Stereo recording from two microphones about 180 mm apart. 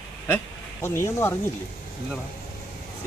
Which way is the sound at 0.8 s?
15° left (ahead or behind).